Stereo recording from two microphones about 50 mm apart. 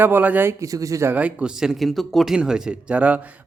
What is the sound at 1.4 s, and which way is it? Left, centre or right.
Speech, centre.